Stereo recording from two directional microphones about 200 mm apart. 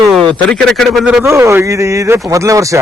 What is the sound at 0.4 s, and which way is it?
Speech, 5° left (ahead or behind).